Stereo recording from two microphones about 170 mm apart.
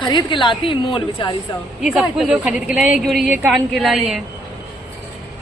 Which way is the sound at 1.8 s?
Centre (ahead or behind).